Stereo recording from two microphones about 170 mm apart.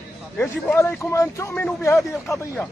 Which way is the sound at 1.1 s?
15° left (ahead or behind).